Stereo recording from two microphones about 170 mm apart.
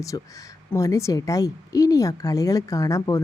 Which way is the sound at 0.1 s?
20° left (ahead or behind).